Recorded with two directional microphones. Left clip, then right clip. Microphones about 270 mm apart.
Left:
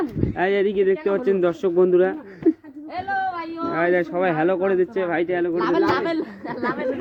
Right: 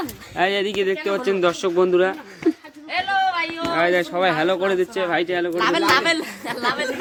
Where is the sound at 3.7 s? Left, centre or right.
Centre.